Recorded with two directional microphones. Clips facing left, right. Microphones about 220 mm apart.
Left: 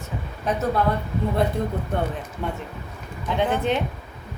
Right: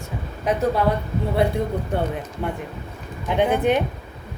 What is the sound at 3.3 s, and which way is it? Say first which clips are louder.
Speech: right 4 dB; 15° right (ahead or behind).